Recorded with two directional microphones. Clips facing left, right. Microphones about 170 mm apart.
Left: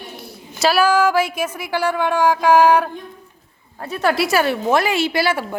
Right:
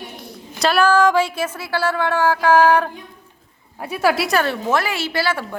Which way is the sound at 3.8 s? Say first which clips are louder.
Even; 10° right (ahead or behind).